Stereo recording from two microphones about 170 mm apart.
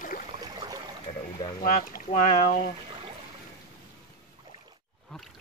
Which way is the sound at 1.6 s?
55° left (ahead or behind).